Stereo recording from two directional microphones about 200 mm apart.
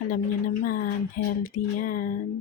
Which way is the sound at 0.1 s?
45° left (ahead or behind).